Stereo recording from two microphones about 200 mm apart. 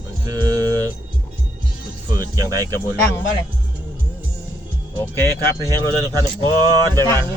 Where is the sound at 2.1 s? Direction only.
15° right (ahead or behind).